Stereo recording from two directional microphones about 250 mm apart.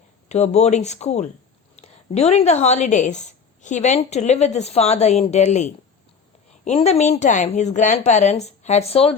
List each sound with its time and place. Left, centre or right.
0.3 s a woman's voice: left